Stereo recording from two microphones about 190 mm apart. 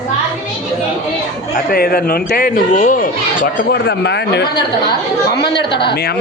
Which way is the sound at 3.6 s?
60° left (ahead or behind).